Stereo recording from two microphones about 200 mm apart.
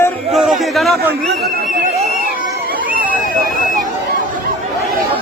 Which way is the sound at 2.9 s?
45° right (ahead or behind).